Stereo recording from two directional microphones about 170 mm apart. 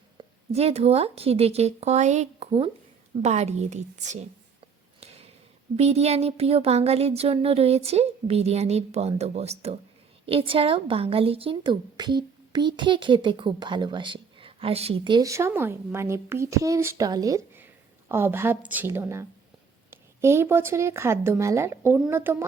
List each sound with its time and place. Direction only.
0.2 s speech: 35° right (ahead or behind)
4.9 s a sound: 35° right (ahead or behind)
5.7 s speech: 40° right (ahead or behind); by 22.4 s 15° right (ahead or behind)